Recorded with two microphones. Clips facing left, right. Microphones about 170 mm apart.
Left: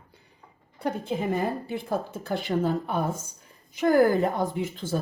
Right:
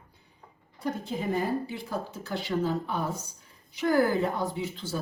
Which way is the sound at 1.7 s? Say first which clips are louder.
Left 5 dB; 50° left (ahead or behind).